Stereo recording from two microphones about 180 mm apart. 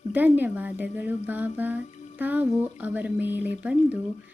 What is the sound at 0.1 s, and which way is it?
Speech, 10° right (ahead or behind).